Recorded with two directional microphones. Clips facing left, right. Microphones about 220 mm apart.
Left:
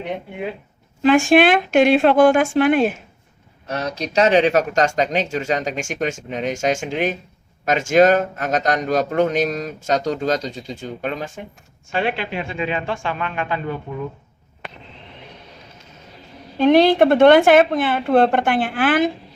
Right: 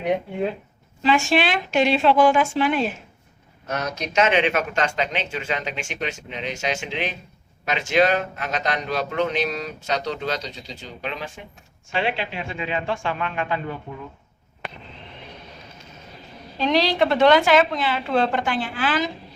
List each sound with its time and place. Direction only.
1.0 s a man's voice: 50° left (ahead or behind)
3.7 s a man's voice: 30° left (ahead or behind); by 13.6 s 60° left (ahead or behind)
16.6 s a woman's voice: 55° left (ahead or behind)